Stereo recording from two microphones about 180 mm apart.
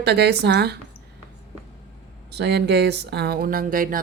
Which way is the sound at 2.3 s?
70° right (ahead or behind).